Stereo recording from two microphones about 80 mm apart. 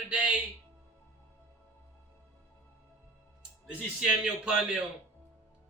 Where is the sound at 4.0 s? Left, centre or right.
Centre.